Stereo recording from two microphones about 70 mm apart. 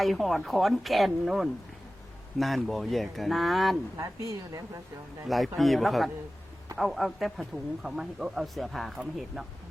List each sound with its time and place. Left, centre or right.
0.0 s speech: centre
3.9 s a woman's voice: right
5.2 s speech: centre